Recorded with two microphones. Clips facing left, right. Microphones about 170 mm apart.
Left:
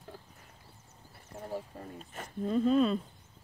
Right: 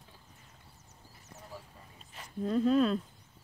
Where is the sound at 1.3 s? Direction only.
50° left (ahead or behind).